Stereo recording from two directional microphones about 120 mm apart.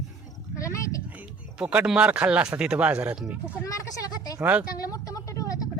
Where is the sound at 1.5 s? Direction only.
10° right (ahead or behind).